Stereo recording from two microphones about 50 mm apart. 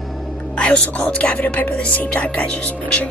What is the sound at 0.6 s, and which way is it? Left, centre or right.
Speech, left.